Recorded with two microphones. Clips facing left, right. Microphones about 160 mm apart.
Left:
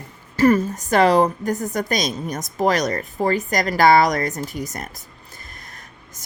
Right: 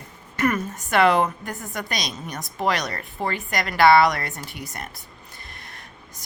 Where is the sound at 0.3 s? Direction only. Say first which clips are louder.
Left 7 dB; 30° left (ahead or behind).